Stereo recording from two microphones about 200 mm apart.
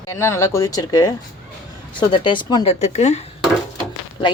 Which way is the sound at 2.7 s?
35° left (ahead or behind).